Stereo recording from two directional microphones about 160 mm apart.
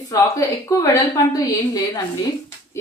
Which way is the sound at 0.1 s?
20° left (ahead or behind).